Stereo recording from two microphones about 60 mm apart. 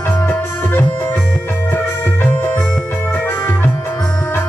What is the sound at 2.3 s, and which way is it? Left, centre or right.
Music, left.